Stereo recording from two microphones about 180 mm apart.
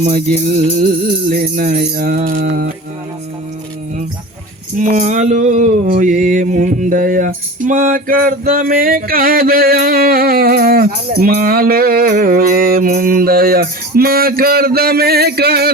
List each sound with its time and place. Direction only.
0.0 s music: 40° right (ahead or behind)
1.3 s mantra: 50° right (ahead or behind)
4.8 s mantra: 45° right (ahead or behind); by 15.7 s 60° right (ahead or behind)